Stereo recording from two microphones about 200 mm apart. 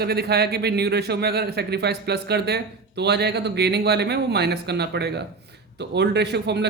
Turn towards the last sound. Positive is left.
turn(degrees=-55)  # may be behind; listen again after turning